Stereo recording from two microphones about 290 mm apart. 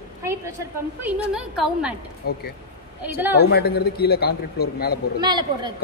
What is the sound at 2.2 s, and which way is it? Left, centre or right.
Speech, left.